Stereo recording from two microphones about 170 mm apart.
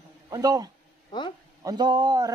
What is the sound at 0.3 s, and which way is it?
A man's voice, 20° right (ahead or behind).